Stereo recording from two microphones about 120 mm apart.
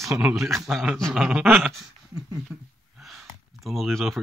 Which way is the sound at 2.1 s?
30° right (ahead or behind).